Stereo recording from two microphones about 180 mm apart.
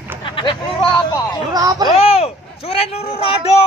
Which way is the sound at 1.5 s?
20° right (ahead or behind).